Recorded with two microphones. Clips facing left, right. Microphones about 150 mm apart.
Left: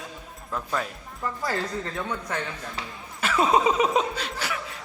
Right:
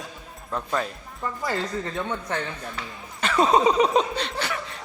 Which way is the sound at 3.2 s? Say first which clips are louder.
Right 2 dB; 5° left (ahead or behind).